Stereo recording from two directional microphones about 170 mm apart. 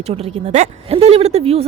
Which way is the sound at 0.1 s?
40° right (ahead or behind).